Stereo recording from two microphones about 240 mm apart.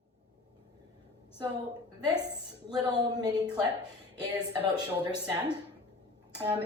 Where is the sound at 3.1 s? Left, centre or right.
Centre.